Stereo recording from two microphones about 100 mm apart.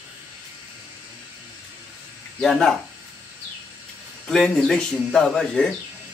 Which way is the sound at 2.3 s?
5° left (ahead or behind).